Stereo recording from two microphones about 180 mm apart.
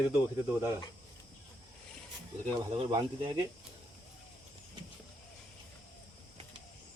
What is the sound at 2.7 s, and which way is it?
Speech, 25° right (ahead or behind).